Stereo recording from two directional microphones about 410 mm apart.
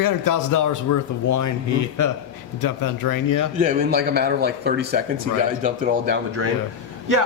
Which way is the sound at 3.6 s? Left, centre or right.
Right.